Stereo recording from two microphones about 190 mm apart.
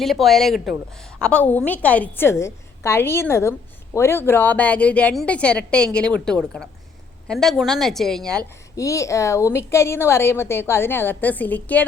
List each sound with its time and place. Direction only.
0.0 s a woman's voice: centre (ahead or behind)
7.3 s a woman's voice: centre (ahead or behind)
8.7 s a woman's voice: 15° left (ahead or behind)